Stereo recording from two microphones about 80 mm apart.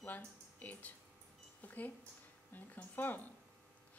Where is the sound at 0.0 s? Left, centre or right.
Left.